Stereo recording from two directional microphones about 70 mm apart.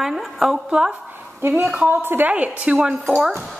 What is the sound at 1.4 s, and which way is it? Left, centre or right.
Speech, right.